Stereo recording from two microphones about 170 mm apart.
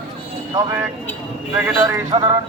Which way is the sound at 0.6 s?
15° right (ahead or behind).